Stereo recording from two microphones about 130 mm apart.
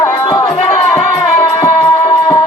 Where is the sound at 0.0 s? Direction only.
30° left (ahead or behind).